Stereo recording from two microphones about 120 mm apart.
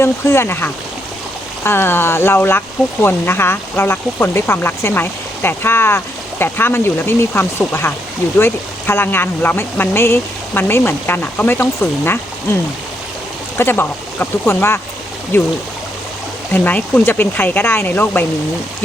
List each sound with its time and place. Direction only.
0.0 s speech: 20° left (ahead or behind)
13.6 s speech: 20° left (ahead or behind)